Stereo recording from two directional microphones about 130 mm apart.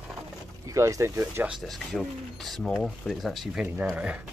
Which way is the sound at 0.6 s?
25° right (ahead or behind).